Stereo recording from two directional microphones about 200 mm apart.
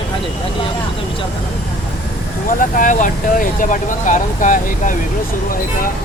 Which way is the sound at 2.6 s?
40° left (ahead or behind).